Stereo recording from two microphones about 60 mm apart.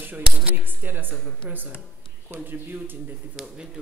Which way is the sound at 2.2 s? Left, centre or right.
Right.